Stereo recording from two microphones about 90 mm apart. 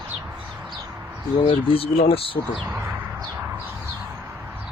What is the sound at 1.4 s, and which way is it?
Speech, 90° left.